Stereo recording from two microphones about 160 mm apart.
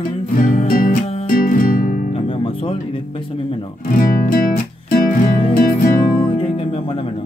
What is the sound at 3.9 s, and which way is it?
Music, 60° left (ahead or behind).